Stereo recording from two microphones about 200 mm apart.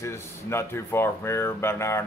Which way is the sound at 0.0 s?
15° left (ahead or behind).